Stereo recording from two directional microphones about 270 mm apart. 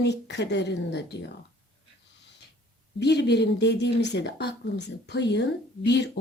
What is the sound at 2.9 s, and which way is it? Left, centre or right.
Speech, left.